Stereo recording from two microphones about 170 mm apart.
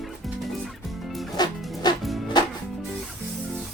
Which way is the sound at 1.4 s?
25° left (ahead or behind).